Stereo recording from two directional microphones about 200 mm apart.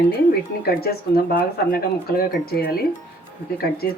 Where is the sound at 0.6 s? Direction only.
50° left (ahead or behind).